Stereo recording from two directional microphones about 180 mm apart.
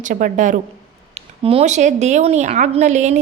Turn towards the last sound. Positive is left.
turn(degrees=-40)  # may be behind; listen again after turning